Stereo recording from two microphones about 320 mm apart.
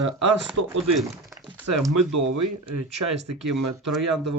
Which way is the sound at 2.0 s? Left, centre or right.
Right.